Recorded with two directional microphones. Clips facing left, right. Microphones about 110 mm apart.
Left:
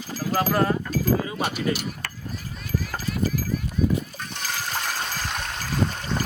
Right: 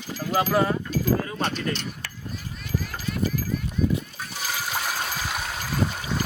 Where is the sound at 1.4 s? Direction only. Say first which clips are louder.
Left 2 dB; 10° left (ahead or behind).